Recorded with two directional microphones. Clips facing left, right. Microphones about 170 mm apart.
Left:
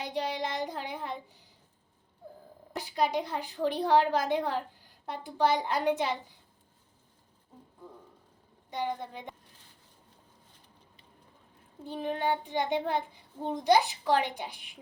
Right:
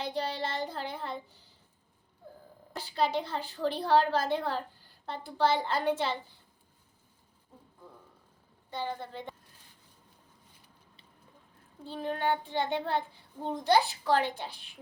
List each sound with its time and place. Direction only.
0.0 s a woman's voice: 15° left (ahead or behind)
2.7 s a woman's voice: 15° left (ahead or behind)
8.7 s a woman's voice: 15° left (ahead or behind)
11.9 s a woman's voice: 15° left (ahead or behind)